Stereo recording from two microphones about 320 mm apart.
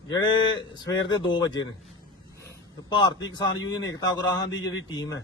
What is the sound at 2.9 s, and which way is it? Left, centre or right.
A man's voice, centre.